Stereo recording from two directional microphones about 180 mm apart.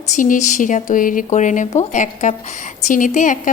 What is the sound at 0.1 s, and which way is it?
Speech, 45° left (ahead or behind).